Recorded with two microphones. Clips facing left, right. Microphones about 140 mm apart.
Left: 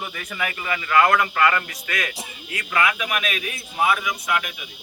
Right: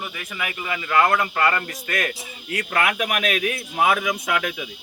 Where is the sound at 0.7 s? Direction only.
20° right (ahead or behind).